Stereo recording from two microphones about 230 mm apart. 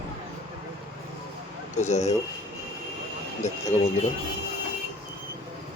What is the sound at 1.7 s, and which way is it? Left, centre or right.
Speech, left.